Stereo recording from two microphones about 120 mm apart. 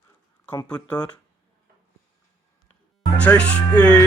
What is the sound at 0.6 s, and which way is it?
Music, 10° left (ahead or behind).